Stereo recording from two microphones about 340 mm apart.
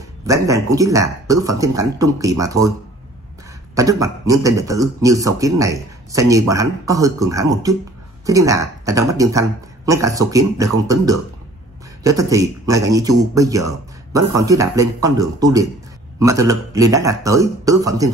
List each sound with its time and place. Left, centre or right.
0.3 s a man's voice: centre
3.7 s a man's voice: centre